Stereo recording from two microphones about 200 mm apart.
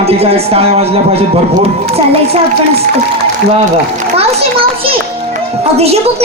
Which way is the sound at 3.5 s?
30° right (ahead or behind).